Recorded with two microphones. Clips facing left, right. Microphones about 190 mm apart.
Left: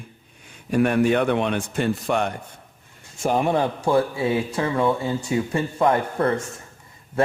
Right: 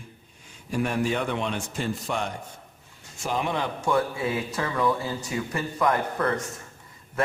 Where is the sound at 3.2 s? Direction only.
50° left (ahead or behind).